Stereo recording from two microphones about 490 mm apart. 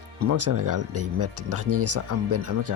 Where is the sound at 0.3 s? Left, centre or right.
Right.